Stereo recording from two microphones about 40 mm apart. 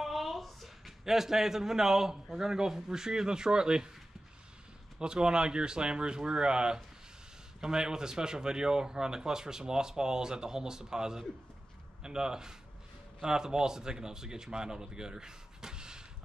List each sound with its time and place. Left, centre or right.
0.0 s a sound: centre
2.3 s speech: centre
4.9 s speech: centre